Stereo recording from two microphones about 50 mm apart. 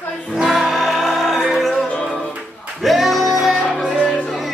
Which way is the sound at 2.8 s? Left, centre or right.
Centre.